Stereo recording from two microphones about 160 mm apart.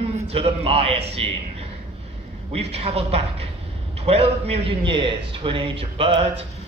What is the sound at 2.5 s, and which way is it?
A man's voice, 40° right (ahead or behind).